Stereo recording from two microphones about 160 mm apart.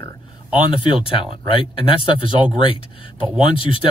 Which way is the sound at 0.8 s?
30° left (ahead or behind).